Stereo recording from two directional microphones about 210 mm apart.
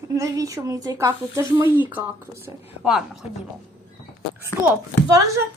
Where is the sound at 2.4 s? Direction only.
5° right (ahead or behind).